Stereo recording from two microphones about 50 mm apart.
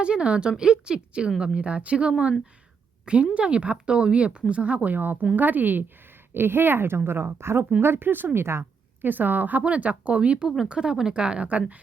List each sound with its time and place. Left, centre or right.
0.0 s speech: right
3.3 s speech: right
6.3 s a woman's voice: right
9.0 s speech: right